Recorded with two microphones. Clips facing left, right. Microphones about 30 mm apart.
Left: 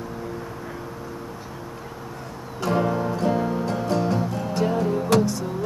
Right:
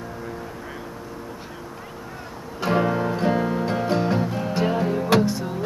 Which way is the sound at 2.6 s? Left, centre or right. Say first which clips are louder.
Right 1 dB; right.